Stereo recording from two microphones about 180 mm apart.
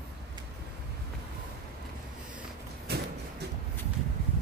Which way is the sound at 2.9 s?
65° right (ahead or behind).